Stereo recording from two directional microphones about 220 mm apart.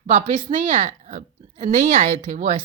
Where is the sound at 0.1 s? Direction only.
30° right (ahead or behind).